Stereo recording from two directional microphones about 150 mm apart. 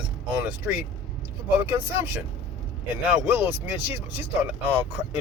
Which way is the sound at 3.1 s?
15° right (ahead or behind).